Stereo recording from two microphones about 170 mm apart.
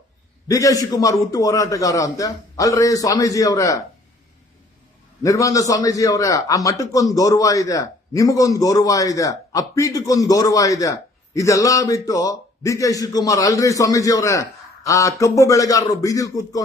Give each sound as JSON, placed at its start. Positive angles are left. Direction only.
{"t": 0.4, "sound": "a man's voice", "side_deg": 20}
{"t": 5.2, "sound": "a man's voice", "side_deg": 20}